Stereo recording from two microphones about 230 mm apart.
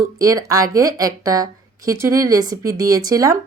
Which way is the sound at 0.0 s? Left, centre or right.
Centre.